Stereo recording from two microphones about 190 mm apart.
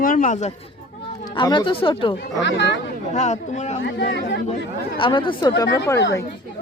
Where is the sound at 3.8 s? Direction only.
65° left (ahead or behind).